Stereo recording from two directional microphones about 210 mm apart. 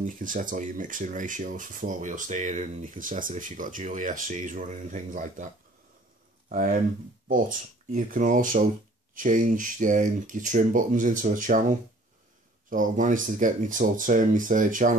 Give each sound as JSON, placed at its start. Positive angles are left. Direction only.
{"t": 0.0, "sound": "speech", "side_deg": -40}
{"t": 6.5, "sound": "speech", "side_deg": -40}
{"t": 12.6, "sound": "speech", "side_deg": -40}